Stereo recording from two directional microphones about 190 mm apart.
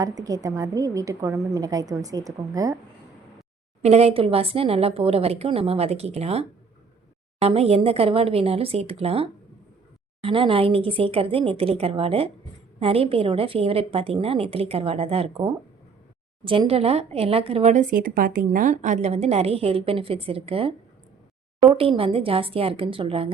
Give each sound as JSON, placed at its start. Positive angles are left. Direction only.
{"t": 0.0, "sound": "a woman's voice", "side_deg": -20}
{"t": 3.8, "sound": "speech", "side_deg": -35}
{"t": 16.4, "sound": "speech", "side_deg": -25}